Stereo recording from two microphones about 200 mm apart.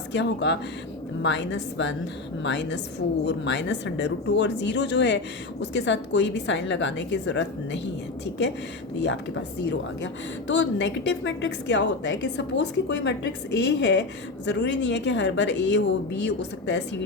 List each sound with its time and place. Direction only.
0.1 s speech: 60° left (ahead or behind)